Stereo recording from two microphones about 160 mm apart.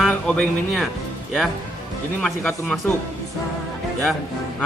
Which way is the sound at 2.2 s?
5° left (ahead or behind).